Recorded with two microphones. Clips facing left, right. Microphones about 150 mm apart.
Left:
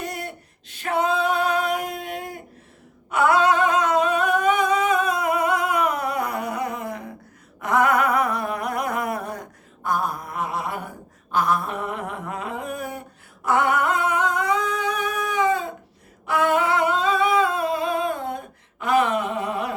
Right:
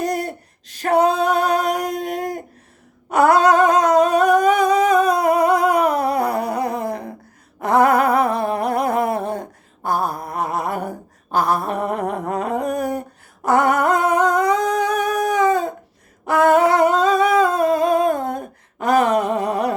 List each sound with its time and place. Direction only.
0.0 s female singing: 40° right (ahead or behind)
3.1 s humming: 40° right (ahead or behind)
7.6 s a sound: 35° right (ahead or behind)
16.2 s humming: 40° right (ahead or behind)